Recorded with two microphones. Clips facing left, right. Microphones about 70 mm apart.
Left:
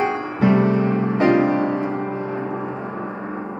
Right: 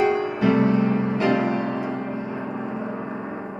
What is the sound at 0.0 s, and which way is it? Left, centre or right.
Music, left.